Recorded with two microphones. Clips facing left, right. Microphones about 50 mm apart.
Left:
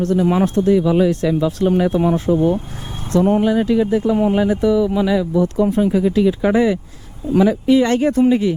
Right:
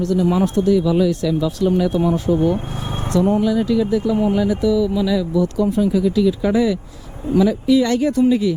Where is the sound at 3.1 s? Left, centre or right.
Left.